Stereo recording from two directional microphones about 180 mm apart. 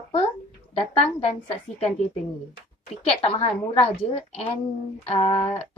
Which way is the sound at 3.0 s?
30° left (ahead or behind).